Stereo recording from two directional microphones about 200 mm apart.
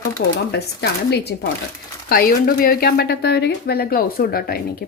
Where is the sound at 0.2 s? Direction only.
55° left (ahead or behind).